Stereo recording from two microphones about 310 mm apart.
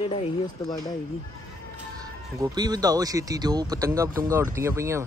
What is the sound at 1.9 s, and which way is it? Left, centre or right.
Speech, centre.